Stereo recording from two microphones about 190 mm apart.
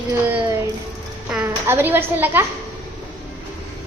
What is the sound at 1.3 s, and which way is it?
A woman's voice, 10° right (ahead or behind).